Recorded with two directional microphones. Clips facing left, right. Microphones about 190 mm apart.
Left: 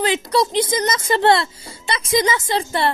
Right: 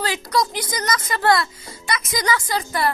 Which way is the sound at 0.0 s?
25° left (ahead or behind).